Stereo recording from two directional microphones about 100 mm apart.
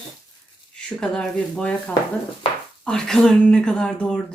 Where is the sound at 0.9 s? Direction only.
5° left (ahead or behind).